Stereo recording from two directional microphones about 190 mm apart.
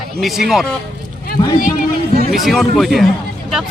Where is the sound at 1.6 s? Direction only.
45° left (ahead or behind).